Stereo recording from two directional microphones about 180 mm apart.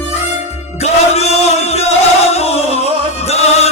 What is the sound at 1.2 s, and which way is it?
Music, 35° left (ahead or behind).